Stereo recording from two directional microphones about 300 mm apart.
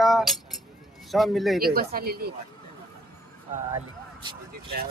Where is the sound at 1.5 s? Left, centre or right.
Right.